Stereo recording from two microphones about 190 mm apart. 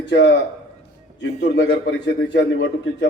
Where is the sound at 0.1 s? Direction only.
65° left (ahead or behind).